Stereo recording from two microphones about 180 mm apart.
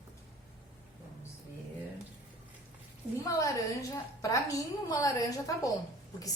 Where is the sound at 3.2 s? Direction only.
15° left (ahead or behind).